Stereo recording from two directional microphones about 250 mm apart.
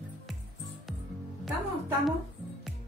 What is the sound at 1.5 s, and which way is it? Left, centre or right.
Speech, centre.